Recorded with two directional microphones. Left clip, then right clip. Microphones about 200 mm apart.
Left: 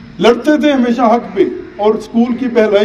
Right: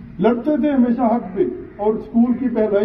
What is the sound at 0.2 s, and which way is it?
A man's voice, 35° left (ahead or behind).